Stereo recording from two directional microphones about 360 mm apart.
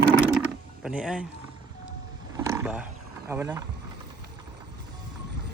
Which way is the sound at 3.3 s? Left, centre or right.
Centre.